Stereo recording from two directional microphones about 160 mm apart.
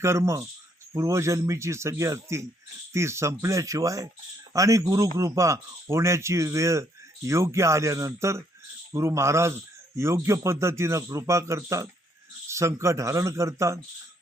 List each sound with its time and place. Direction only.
0.0 s speech: 15° right (ahead or behind)